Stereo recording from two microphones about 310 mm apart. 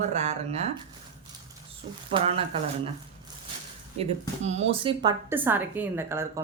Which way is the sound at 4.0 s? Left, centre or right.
Right.